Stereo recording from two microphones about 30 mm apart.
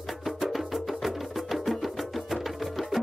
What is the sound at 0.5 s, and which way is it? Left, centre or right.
Music, centre.